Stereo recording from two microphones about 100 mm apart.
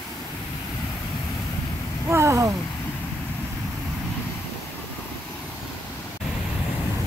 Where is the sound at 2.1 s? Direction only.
30° right (ahead or behind).